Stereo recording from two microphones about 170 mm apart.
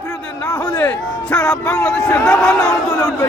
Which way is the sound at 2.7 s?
20° left (ahead or behind).